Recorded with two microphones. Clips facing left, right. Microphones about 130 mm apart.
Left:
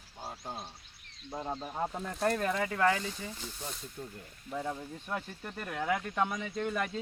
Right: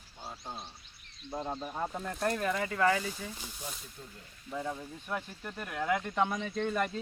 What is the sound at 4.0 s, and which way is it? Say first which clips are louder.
Speech: left 6 dB; 45° left (ahead or behind).